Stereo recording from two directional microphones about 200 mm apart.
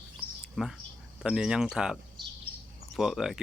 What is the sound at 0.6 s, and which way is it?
Speech, centre (ahead or behind).